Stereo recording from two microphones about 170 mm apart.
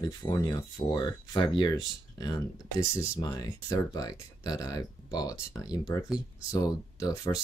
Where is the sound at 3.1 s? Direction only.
20° left (ahead or behind).